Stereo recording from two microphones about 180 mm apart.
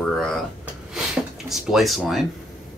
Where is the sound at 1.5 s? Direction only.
Centre (ahead or behind).